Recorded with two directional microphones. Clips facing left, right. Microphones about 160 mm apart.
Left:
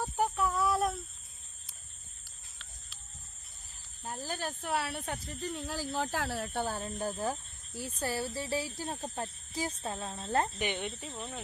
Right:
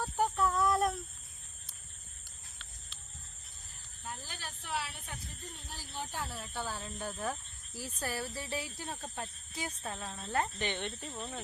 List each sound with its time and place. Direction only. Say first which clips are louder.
0.0 s a sound: even; 10° left (ahead or behind)
4.0 s speech: left 8 dB; 40° left (ahead or behind)
6.8 s speech: left 4 dB; 35° left (ahead or behind)
10.6 s speech: left 2 dB; 10° left (ahead or behind)